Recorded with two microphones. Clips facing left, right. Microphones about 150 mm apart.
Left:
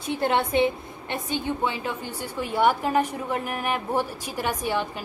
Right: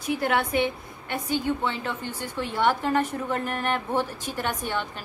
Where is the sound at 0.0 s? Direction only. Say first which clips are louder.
Left 1 dB; 25° left (ahead or behind).